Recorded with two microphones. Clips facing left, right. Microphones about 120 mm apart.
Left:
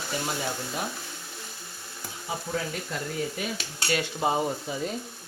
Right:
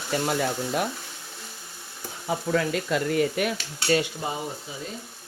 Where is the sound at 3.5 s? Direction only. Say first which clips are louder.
Right 5 dB; 35° right (ahead or behind).